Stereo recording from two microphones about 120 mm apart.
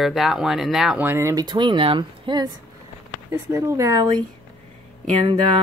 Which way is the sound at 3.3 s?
20° right (ahead or behind).